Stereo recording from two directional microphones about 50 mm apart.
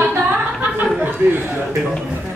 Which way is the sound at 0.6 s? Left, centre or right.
Right.